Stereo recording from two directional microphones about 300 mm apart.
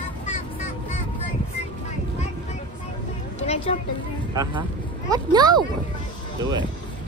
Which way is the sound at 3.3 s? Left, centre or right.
Left.